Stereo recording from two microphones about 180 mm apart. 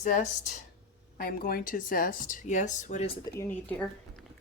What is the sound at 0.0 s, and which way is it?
Speech, 40° left (ahead or behind).